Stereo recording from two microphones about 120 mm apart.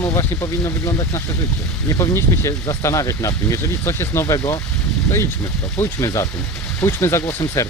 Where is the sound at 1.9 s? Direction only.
25° left (ahead or behind).